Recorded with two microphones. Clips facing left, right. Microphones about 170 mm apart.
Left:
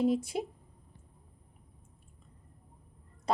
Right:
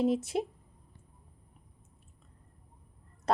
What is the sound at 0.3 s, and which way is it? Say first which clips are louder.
Speech: right 3 dB; 45° right (ahead or behind).